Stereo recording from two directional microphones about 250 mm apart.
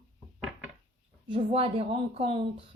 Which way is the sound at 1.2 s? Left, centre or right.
Right.